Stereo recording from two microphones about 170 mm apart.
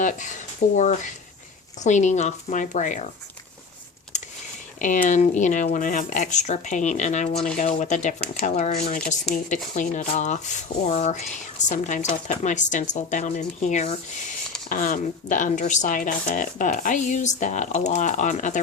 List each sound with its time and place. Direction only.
0.0 s speech: 45° left (ahead or behind)
4.8 s speech: 50° left (ahead or behind)
14.7 s speech: 50° left (ahead or behind)